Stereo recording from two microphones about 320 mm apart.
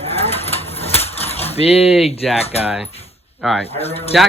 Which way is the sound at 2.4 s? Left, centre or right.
Centre.